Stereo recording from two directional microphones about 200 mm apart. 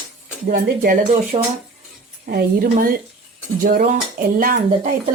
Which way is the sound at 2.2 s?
50° right (ahead or behind).